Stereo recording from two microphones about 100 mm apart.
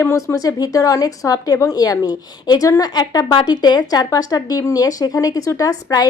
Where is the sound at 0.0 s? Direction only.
25° left (ahead or behind).